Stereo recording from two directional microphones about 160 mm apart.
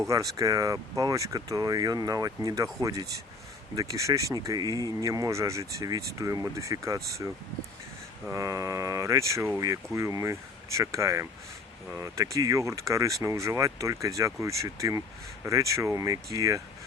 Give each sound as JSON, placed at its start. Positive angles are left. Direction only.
{"t": 0.0, "sound": "speech", "side_deg": -20}
{"t": 8.3, "sound": "speech", "side_deg": -20}